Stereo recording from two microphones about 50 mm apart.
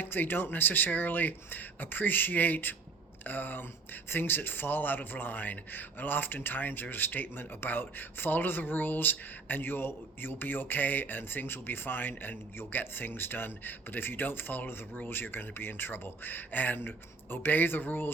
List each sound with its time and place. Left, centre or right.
0.0 s speech: left